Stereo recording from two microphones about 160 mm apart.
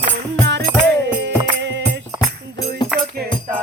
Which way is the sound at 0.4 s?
90° right.